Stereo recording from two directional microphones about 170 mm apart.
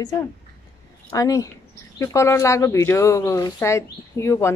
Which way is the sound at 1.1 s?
20° left (ahead or behind).